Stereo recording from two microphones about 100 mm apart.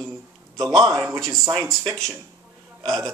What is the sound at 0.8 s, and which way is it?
Speech, 35° right (ahead or behind).